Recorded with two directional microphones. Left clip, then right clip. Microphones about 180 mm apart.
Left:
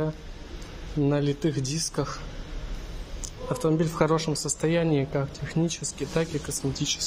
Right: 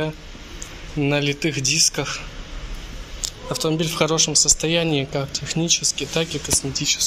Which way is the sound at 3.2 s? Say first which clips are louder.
Right 4 dB; 15° left (ahead or behind).